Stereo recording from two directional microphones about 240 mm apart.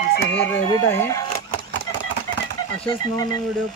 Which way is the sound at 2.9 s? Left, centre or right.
Centre.